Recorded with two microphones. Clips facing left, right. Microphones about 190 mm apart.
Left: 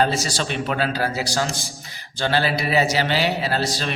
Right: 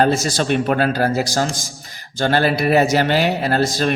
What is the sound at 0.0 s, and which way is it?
A man's voice, 50° right (ahead or behind).